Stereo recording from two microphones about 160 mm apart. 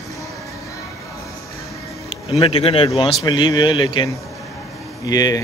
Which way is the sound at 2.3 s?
40° left (ahead or behind).